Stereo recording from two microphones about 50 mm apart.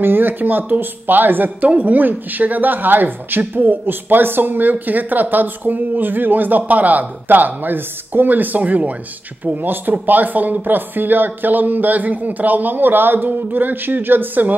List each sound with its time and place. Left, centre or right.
0.0 s speech: right